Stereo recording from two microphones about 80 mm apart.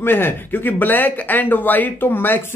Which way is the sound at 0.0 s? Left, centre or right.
Left.